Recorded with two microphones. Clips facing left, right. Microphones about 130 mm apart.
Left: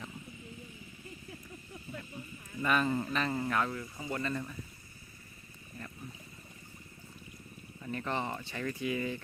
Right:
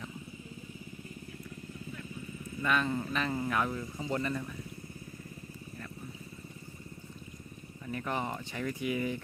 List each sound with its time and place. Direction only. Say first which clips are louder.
2.6 s speech: left 1 dB; 5° left (ahead or behind)
3.7 s speech: right 3 dB; 20° right (ahead or behind)
7.9 s speech: even; 5° right (ahead or behind)